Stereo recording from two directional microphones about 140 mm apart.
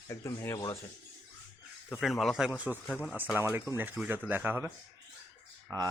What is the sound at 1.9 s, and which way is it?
Speech, centre (ahead or behind).